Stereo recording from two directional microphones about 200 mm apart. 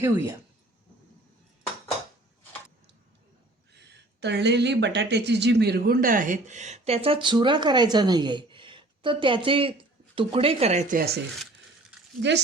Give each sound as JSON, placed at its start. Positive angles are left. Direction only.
{"t": 0.0, "sound": "speech", "side_deg": -15}
{"t": 4.2, "sound": "speech", "side_deg": -60}
{"t": 12.2, "sound": "speech", "side_deg": -60}